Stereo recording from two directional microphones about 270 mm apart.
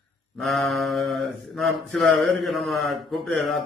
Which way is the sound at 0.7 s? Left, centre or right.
Centre.